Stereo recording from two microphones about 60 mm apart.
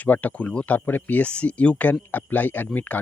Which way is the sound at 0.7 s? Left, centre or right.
Left.